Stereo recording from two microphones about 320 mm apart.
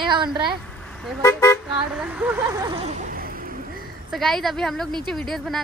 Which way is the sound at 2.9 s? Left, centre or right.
Right.